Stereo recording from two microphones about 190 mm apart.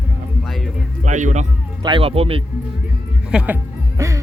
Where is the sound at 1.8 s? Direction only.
25° right (ahead or behind).